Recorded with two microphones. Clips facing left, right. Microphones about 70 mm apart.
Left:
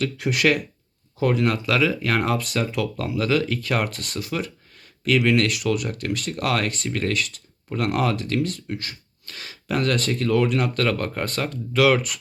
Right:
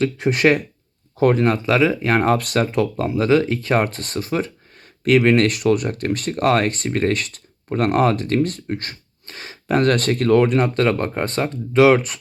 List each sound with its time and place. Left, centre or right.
0.0 s speech: right
2.4 s speech: right
2.7 s speech: right
9.2 s speech: right